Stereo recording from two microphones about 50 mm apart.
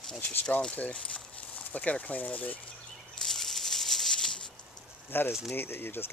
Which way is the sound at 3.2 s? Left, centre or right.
Centre.